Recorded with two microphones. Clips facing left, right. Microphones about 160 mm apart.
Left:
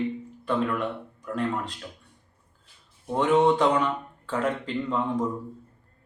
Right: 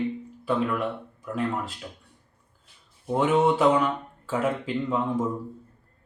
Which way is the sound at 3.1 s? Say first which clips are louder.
Left 1 dB; 5° right (ahead or behind).